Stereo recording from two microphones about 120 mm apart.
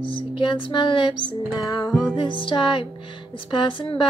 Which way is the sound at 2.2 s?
45° left (ahead or behind).